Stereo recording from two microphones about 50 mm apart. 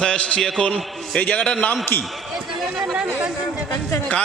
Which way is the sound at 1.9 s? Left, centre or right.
Left.